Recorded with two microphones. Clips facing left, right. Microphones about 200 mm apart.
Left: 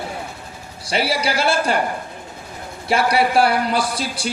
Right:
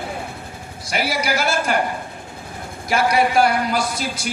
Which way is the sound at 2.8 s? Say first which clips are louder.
Even; 30° left (ahead or behind).